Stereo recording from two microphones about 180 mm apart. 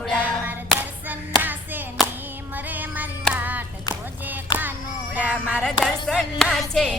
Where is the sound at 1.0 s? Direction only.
10° right (ahead or behind).